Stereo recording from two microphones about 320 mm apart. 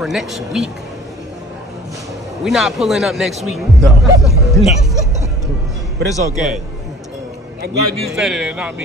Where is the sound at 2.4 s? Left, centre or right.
Centre.